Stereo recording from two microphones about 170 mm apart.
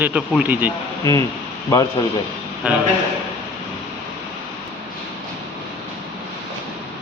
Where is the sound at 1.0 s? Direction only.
20° left (ahead or behind).